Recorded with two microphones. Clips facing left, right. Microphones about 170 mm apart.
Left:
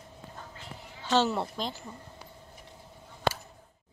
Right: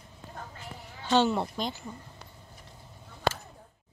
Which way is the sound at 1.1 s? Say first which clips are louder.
Right 2 dB; centre (ahead or behind).